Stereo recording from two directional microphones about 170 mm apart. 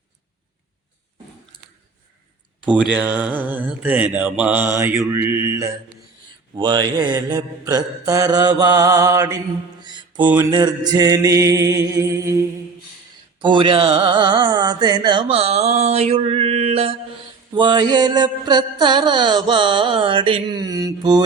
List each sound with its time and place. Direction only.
2.6 s mantra: 5° right (ahead or behind)
9.8 s music: 25° right (ahead or behind)
10.3 s mantra: 25° right (ahead or behind)
13.4 s a sound: 30° right (ahead or behind)
17.5 s mantra: 25° right (ahead or behind)